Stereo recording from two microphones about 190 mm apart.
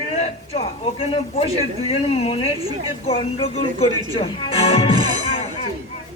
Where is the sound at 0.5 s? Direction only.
30° left (ahead or behind).